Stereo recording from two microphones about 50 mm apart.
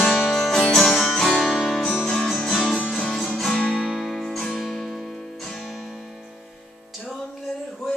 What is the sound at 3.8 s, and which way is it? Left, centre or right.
Music, centre.